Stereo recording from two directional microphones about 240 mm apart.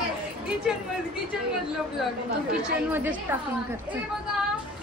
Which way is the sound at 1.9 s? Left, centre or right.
Centre.